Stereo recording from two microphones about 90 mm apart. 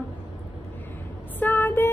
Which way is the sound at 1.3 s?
20° left (ahead or behind).